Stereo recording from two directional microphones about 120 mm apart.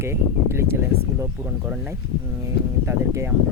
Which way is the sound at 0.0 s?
20° right (ahead or behind).